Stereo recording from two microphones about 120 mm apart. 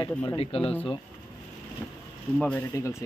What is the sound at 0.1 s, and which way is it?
Speech, 15° left (ahead or behind).